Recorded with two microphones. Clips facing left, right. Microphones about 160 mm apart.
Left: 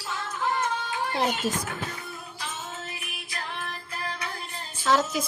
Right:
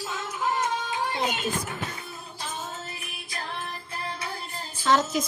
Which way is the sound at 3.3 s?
30° right (ahead or behind).